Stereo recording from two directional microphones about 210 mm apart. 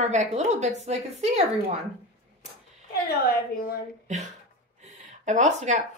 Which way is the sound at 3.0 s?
45° left (ahead or behind).